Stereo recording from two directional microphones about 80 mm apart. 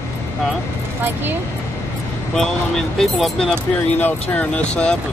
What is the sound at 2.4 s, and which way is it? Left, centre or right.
Speech, centre.